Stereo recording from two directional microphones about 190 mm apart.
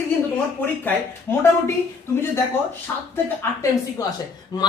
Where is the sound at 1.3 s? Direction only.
10° left (ahead or behind).